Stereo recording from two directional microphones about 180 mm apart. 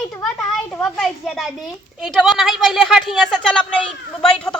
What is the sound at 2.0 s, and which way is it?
A woman's voice, centre (ahead or behind).